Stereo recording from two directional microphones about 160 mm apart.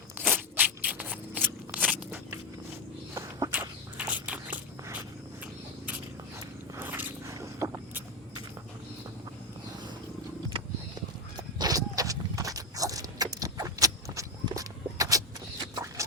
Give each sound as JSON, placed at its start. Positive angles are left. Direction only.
{"t": 0.2, "sound": "crunch", "side_deg": -10}
{"t": 2.0, "sound": "walk", "side_deg": -15}
{"t": 3.5, "sound": "walk", "side_deg": -10}
{"t": 6.7, "sound": "zipper", "side_deg": -10}
{"t": 11.3, "sound": "horse", "side_deg": -25}
{"t": 15.7, "sound": "a sound", "side_deg": -20}